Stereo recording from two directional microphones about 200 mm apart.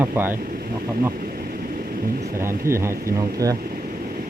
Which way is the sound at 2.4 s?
15° right (ahead or behind).